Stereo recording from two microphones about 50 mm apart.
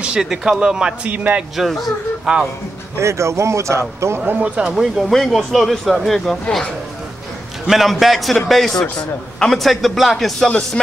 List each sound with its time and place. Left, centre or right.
0.0 s speech: centre
1.0 s speech: right
1.6 s a man's voice: centre
2.3 s speech: centre
3.0 s speech: right
4.6 s a man's voice: centre
7.6 s a man's voice: centre